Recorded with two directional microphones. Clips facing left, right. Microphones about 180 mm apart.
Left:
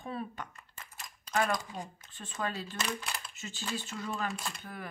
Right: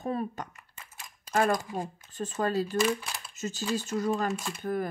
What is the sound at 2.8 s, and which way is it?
Speech, centre (ahead or behind).